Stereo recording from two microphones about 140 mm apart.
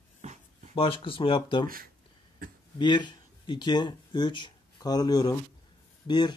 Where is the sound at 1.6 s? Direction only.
90° right.